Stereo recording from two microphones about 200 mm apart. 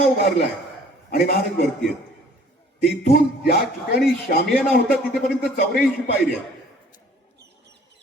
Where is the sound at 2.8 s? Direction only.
55° left (ahead or behind).